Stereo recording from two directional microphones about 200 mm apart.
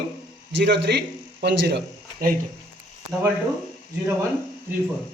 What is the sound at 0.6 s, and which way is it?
A man's voice, 60° right (ahead or behind).